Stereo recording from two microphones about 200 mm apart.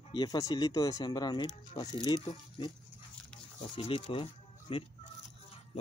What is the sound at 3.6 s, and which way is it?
Speech, 25° left (ahead or behind).